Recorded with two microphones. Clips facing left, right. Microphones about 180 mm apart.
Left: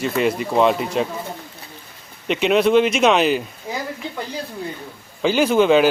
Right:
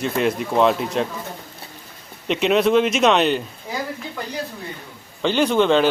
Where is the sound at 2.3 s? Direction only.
Centre (ahead or behind).